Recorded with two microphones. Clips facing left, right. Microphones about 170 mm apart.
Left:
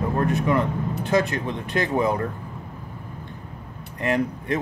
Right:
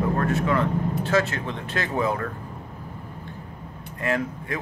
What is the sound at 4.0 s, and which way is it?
Speech, 20° left (ahead or behind).